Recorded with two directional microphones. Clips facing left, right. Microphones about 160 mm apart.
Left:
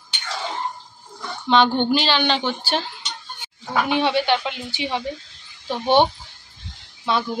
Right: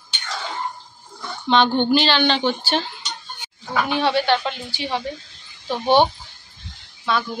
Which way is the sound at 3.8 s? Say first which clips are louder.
Right 1 dB; 15° left (ahead or behind).